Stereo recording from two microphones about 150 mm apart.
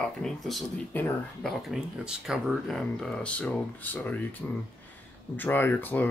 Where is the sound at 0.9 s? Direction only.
10° left (ahead or behind).